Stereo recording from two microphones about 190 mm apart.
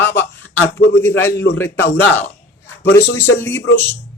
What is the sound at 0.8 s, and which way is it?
Speech, 70° left (ahead or behind).